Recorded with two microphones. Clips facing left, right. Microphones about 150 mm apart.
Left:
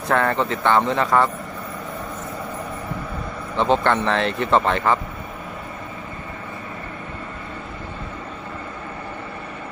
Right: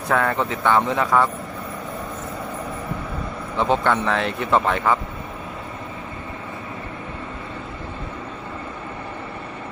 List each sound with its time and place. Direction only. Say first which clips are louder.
0.1 s speech: left 1 dB; 5° right (ahead or behind)
3.6 s speech: left 1 dB; 5° right (ahead or behind)